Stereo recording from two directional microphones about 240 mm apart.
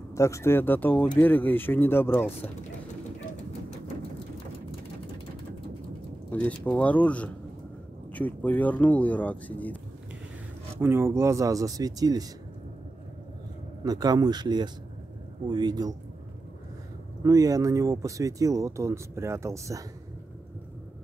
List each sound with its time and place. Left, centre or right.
0.1 s speech: centre
6.3 s speech: centre
10.8 s speech: centre
13.8 s speech: centre
17.2 s speech: centre